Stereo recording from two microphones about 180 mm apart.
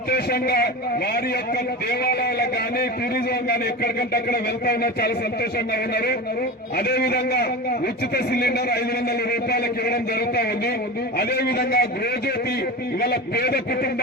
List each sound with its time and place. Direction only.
0.1 s speech: 60° left (ahead or behind)
1.9 s speech: 60° left (ahead or behind)
13.0 s speech: 60° left (ahead or behind)